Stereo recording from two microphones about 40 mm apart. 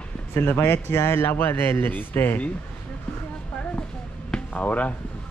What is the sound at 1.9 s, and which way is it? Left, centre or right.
Speech, left.